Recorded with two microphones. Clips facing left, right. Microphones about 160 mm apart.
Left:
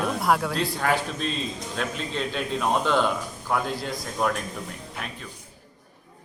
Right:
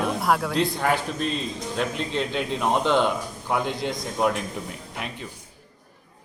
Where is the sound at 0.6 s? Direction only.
15° right (ahead or behind).